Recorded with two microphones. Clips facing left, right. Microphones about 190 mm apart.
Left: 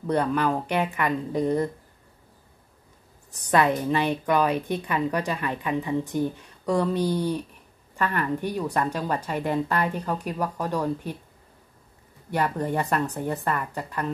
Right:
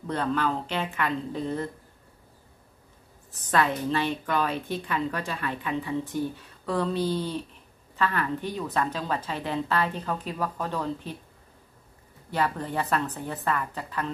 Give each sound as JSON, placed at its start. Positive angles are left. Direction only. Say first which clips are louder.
{"t": 0.0, "sound": "a woman's voice", "louder": "left 4 dB", "side_deg": 15}
{"t": 3.3, "sound": "a woman's voice", "louder": "left 4 dB", "side_deg": 15}
{"t": 4.5, "sound": "speech", "louder": "left 5 dB", "side_deg": 60}
{"t": 4.8, "sound": "a woman's voice", "louder": "left 4 dB", "side_deg": 15}
{"t": 12.9, "sound": "a woman's voice", "louder": "left 3 dB", "side_deg": 15}